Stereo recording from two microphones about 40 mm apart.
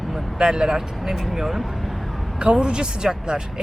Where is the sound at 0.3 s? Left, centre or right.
Centre.